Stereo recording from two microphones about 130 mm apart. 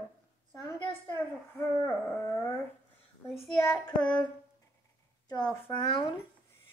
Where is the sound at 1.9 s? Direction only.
15° left (ahead or behind).